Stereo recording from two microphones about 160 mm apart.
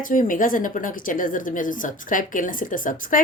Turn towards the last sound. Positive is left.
turn(degrees=55)  # may be behind; listen again after turning